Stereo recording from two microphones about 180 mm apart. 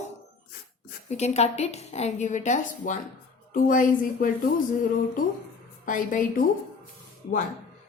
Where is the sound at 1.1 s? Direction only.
35° left (ahead or behind).